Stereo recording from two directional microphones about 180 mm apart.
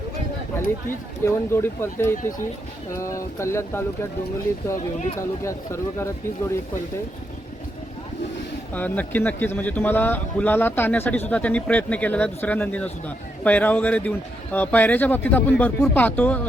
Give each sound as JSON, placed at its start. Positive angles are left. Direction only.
{"t": 0.9, "sound": "a man's voice", "side_deg": 15}
{"t": 5.4, "sound": "a man's voice", "side_deg": 15}
{"t": 8.7, "sound": "a man's voice", "side_deg": 10}